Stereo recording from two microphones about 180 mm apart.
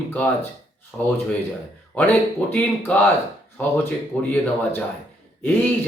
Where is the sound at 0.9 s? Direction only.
5° left (ahead or behind).